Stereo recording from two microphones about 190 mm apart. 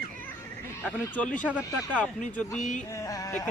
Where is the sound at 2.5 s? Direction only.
40° left (ahead or behind).